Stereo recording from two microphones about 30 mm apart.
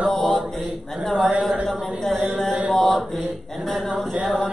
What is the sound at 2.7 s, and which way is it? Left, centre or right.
Mantra, centre.